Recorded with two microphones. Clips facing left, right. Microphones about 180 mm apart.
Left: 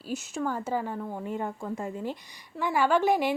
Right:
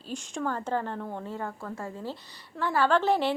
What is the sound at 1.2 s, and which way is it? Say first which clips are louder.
A woman's voice: left 3 dB; 15° left (ahead or behind).